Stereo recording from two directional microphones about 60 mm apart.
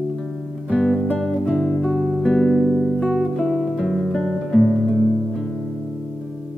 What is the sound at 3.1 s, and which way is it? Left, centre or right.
Music, centre.